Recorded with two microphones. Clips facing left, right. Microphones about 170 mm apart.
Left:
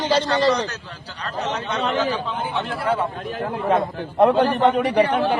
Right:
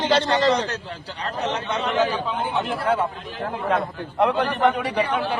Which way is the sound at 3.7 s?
35° left (ahead or behind).